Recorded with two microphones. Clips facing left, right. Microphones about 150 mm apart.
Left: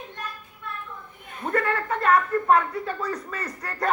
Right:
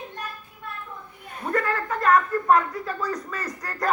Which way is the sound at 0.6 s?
45° right (ahead or behind).